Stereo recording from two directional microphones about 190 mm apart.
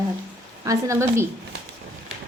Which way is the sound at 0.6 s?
15° right (ahead or behind).